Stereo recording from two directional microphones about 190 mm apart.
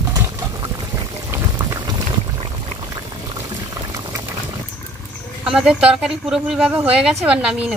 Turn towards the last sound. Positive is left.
turn(degrees=-5)  # may be behind; listen again after turning